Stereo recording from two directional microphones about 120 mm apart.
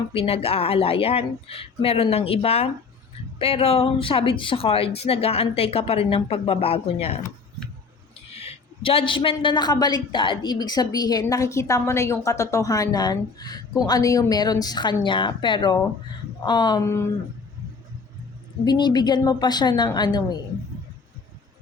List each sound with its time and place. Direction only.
0.1 s speech: 55° left (ahead or behind)
8.4 s a woman's voice: 55° left (ahead or behind); by 16.8 s 35° left (ahead or behind)
16.8 s speech: 25° left (ahead or behind)
18.6 s a woman's voice: 35° left (ahead or behind)